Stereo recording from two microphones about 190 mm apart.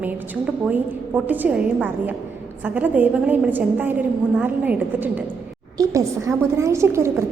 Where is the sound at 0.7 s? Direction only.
10° right (ahead or behind).